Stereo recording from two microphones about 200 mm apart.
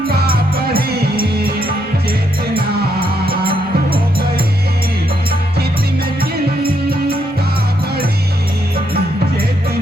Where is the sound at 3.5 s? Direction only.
25° right (ahead or behind).